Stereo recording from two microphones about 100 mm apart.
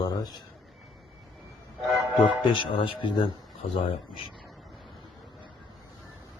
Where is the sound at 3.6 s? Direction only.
75° left (ahead or behind).